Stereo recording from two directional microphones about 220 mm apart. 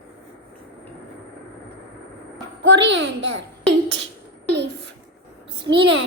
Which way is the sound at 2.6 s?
55° right (ahead or behind).